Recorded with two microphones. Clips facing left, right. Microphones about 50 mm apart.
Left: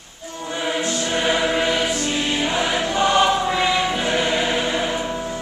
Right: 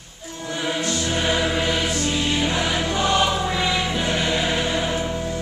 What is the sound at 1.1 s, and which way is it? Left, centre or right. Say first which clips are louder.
Music: left 2 dB; centre.